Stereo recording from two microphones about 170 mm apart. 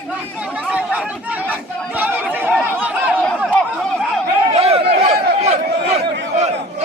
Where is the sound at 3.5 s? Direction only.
5° left (ahead or behind).